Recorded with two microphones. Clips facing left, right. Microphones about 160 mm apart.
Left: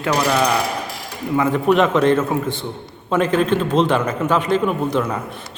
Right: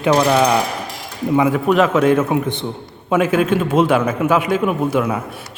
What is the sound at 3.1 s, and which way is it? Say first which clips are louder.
A man's voice: right 2 dB; 10° right (ahead or behind).